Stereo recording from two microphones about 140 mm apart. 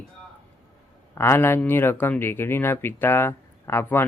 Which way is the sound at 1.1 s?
20° left (ahead or behind).